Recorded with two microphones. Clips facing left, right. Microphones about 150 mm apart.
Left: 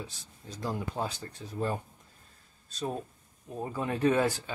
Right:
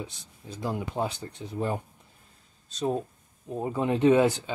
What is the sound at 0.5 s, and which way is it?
Speech, 10° right (ahead or behind).